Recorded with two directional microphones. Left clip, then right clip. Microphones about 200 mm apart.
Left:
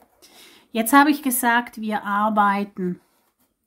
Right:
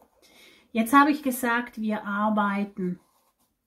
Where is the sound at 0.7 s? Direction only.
30° left (ahead or behind).